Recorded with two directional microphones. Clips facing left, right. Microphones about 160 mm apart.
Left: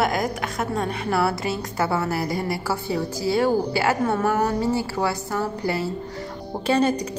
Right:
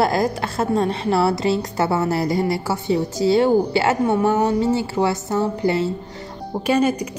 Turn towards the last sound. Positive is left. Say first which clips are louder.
# right 2 dB
turn(degrees=-10)  # may be behind; listen again after turning